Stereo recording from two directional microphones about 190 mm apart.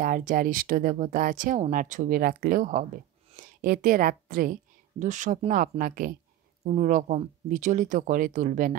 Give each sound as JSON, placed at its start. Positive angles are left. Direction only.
{"t": 0.0, "sound": "a woman's voice", "side_deg": -45}